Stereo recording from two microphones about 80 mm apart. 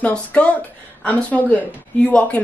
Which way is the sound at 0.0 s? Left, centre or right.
Centre.